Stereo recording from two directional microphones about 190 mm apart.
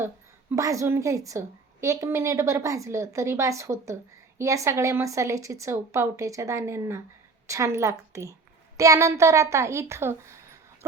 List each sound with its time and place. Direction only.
0.5 s a woman's voice: 15° right (ahead or behind)